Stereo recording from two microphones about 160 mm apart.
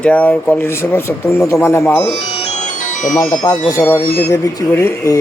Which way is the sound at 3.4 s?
20° left (ahead or behind).